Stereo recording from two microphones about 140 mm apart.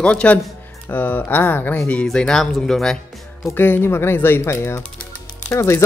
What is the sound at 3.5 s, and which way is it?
Speech, 15° left (ahead or behind).